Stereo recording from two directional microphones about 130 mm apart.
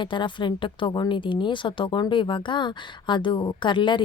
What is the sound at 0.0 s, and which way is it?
Speech, 40° left (ahead or behind).